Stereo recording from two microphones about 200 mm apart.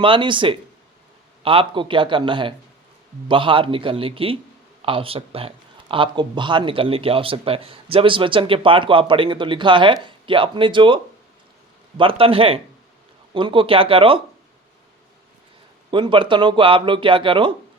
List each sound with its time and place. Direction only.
0.0 s speech: 25° right (ahead or behind)
15.9 s speech: 25° right (ahead or behind)